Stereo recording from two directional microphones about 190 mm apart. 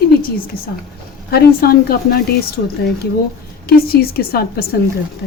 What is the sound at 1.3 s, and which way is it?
Speech, 55° left (ahead or behind).